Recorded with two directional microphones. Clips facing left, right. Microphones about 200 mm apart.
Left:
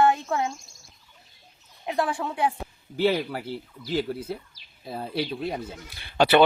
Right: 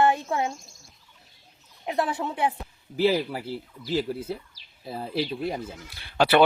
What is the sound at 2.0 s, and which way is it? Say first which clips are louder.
Speech: left 1 dB; 20° right (ahead or behind).